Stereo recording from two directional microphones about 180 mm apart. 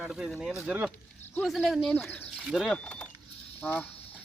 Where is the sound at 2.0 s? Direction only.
5° left (ahead or behind).